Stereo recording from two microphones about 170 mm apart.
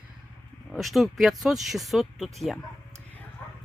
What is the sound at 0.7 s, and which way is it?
Speech, centre (ahead or behind).